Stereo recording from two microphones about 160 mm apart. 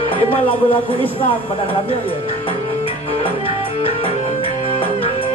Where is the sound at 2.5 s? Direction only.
35° left (ahead or behind).